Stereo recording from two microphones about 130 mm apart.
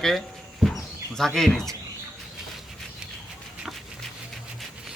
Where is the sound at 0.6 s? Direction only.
Centre (ahead or behind).